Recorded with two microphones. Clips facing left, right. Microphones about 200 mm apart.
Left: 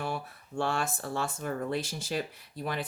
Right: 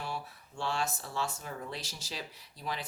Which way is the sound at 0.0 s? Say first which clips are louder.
Left 5 dB; 55° left (ahead or behind).